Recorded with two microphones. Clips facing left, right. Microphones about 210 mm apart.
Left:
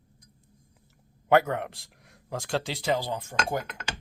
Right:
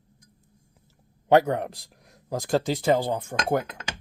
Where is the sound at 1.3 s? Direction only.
35° right (ahead or behind); by 3.6 s 55° right (ahead or behind).